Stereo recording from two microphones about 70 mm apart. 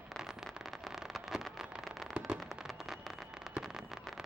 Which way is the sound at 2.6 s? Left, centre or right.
Centre.